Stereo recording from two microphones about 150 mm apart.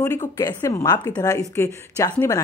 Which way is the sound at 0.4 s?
25° left (ahead or behind).